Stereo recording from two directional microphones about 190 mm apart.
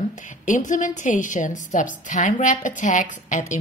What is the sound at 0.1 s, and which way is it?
A woman's voice, 40° left (ahead or behind).